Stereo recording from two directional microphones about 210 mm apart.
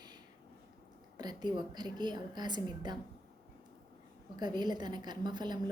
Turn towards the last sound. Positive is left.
turn(degrees=-20)  # may be behind; listen again after turning